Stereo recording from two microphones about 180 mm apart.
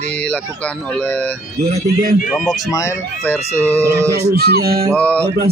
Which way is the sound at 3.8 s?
15° right (ahead or behind).